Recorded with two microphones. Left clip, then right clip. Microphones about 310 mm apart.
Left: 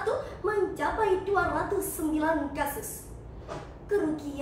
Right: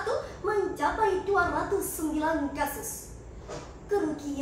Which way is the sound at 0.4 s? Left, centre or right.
Centre.